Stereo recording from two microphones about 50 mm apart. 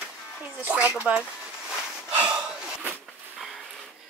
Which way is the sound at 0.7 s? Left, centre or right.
Right.